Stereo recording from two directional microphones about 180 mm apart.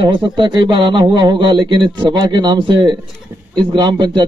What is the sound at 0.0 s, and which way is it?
A man's voice, 25° right (ahead or behind).